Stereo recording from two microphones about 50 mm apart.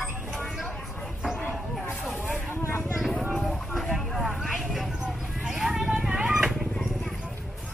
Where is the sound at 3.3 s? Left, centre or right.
Centre.